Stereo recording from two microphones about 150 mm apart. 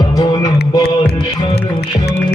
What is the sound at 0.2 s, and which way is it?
Music, 25° left (ahead or behind).